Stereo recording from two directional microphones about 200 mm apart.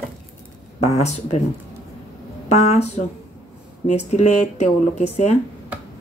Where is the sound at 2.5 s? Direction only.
35° left (ahead or behind).